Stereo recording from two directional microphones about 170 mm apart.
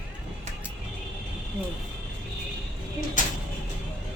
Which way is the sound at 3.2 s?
50° left (ahead or behind).